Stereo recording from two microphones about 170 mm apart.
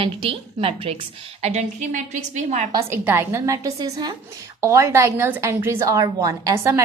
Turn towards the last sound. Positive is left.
turn(degrees=-15)  # may be behind; listen again after turning